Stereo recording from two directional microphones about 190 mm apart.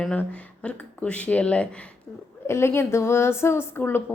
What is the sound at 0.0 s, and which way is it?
A woman's voice, 5° left (ahead or behind).